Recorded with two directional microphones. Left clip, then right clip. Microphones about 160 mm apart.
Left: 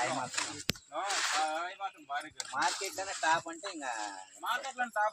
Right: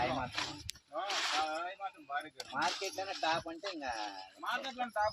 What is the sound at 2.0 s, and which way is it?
Speech, 5° right (ahead or behind).